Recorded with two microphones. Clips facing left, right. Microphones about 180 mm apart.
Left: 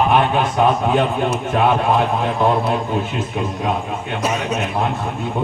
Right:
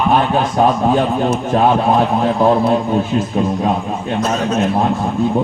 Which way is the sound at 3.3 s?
35° right (ahead or behind).